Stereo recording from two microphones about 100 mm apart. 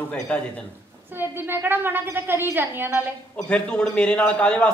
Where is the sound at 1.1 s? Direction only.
20° right (ahead or behind).